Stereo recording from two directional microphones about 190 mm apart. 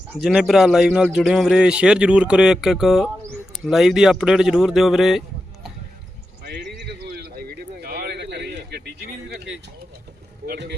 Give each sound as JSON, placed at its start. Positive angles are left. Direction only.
{"t": 0.1, "sound": "a man's voice", "side_deg": -5}
{"t": 6.7, "sound": "a sound", "side_deg": -55}
{"t": 10.4, "sound": "speech", "side_deg": -55}